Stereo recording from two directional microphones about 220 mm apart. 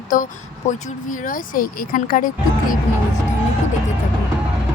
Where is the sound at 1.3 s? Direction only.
40° left (ahead or behind).